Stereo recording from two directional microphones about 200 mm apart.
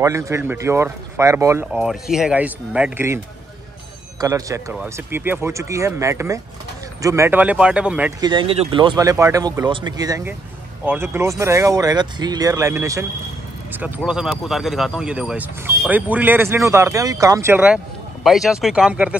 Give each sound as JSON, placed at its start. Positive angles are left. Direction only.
{"t": 0.0, "sound": "speech", "side_deg": -15}
{"t": 4.2, "sound": "speech", "side_deg": -15}
{"t": 8.2, "sound": "speech", "side_deg": -25}